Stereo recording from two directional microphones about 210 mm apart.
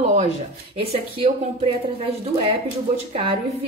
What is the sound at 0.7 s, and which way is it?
Speech, 25° right (ahead or behind).